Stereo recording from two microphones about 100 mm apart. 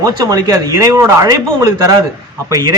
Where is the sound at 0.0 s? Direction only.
40° right (ahead or behind).